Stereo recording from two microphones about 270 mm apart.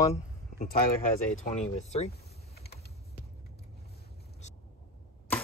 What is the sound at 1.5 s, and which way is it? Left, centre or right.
Speech, left.